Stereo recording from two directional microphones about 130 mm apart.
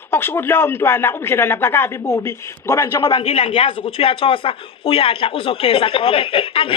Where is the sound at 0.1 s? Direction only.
15° left (ahead or behind).